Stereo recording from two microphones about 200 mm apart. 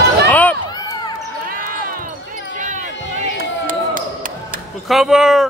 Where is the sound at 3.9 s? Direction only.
40° right (ahead or behind).